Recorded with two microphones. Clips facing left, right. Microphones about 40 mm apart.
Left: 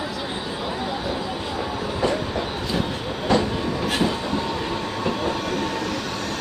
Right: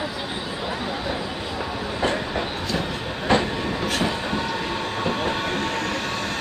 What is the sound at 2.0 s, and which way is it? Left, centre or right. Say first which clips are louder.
Train: even; right.